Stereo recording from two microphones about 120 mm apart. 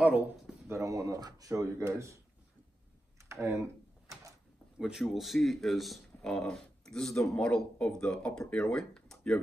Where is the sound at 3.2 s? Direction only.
25° right (ahead or behind).